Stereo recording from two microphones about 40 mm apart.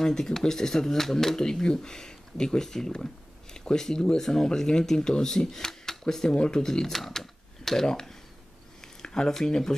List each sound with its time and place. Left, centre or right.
0.0 s speech: centre
9.0 s a sound: centre
9.3 s speech: centre